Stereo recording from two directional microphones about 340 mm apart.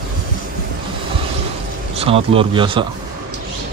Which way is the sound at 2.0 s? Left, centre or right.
Centre.